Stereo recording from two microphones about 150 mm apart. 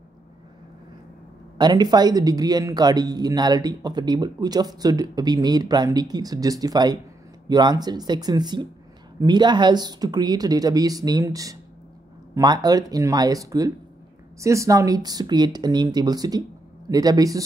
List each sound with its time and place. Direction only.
1.6 s speech: 25° right (ahead or behind)